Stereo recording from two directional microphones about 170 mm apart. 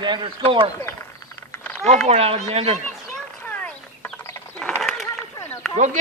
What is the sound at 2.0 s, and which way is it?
Speech, 40° right (ahead or behind).